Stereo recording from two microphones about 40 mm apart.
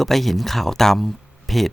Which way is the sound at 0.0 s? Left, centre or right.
Centre.